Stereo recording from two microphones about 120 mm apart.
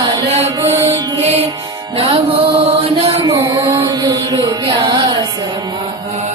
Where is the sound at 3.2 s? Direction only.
25° right (ahead or behind).